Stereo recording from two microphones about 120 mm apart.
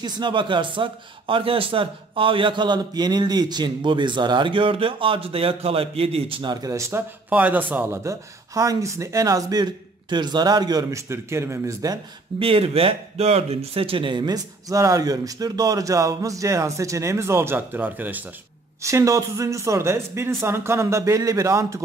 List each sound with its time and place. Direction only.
0.0 s speech: 40° right (ahead or behind)
6.7 s speech: 20° right (ahead or behind)
7.2 s a man's voice: 10° right (ahead or behind)
12.4 s speech: 50° right (ahead or behind); by 18.2 s 15° right (ahead or behind)
18.8 s speech: 25° right (ahead or behind)